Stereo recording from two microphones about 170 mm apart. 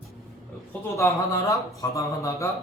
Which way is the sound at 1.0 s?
20° left (ahead or behind).